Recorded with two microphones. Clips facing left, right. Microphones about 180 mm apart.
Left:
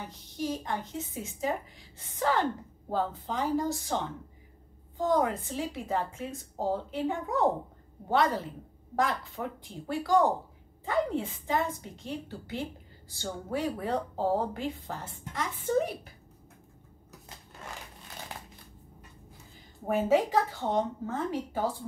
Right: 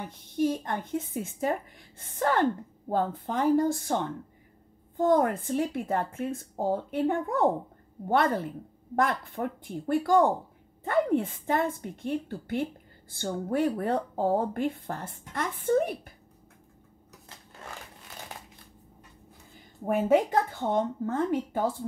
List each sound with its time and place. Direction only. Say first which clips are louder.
0.0 s a woman's voice: right 7 dB; 55° right (ahead or behind)
19.9 s a woman's voice: right 2 dB; 55° right (ahead or behind)